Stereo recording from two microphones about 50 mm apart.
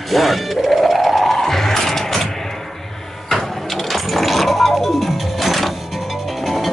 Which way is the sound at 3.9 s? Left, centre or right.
Centre.